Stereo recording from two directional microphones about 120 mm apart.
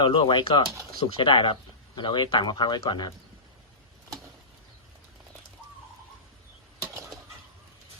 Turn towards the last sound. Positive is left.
turn(degrees=-25)  # may be behind; listen again after turning